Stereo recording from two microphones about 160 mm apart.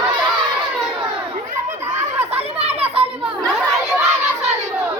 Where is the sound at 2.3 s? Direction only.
40° right (ahead or behind).